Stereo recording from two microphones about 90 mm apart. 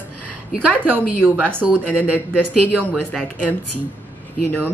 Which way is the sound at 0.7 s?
20° right (ahead or behind).